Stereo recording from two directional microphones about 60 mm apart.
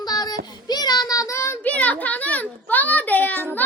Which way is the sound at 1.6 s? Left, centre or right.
Left.